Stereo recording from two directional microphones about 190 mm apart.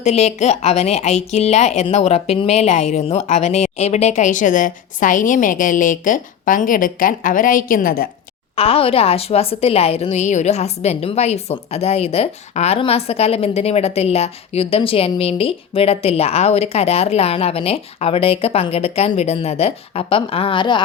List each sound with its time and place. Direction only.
0.0 s a woman's voice: 35° left (ahead or behind); by 8.1 s 50° left (ahead or behind)
8.5 s a woman's voice: 30° left (ahead or behind)